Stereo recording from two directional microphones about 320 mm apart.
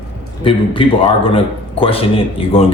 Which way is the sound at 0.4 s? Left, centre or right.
Centre.